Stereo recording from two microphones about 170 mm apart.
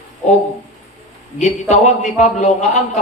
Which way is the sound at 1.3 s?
45° left (ahead or behind).